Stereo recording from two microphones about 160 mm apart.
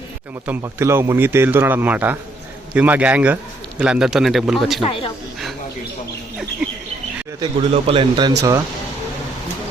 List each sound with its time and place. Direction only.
0.4 s speech: 15° right (ahead or behind)
4.8 s speech: 35° left (ahead or behind)
7.3 s speech: 30° right (ahead or behind)
8.4 s speech: 20° right (ahead or behind)